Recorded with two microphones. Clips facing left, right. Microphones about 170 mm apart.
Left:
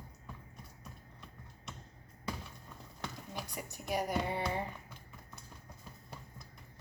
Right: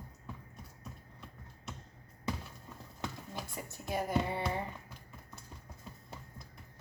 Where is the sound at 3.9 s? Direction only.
20° left (ahead or behind).